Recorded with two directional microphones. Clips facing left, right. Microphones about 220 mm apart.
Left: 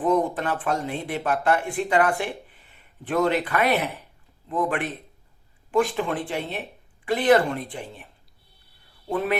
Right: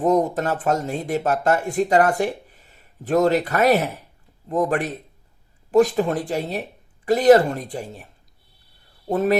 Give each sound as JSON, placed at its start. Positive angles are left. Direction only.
{"t": 0.0, "sound": "speech", "side_deg": -40}
{"t": 9.0, "sound": "speech", "side_deg": -40}